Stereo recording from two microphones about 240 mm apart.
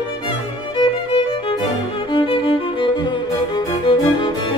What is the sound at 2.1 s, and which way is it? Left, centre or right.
Music, left.